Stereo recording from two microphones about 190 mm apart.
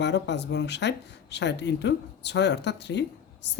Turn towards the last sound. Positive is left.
turn(degrees=65)  # may be behind; listen again after turning